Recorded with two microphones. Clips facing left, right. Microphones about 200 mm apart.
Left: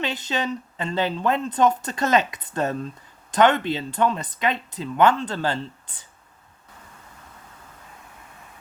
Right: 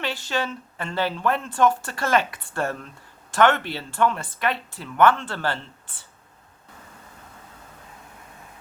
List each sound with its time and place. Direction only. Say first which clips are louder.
0.0 s a woman's voice: left 1 dB; 20° left (ahead or behind)